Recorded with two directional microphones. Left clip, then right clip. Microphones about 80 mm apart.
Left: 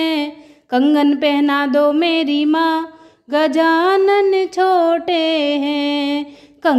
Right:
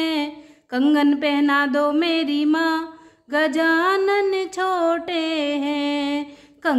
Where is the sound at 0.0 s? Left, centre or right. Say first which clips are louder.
Left 4 dB; left.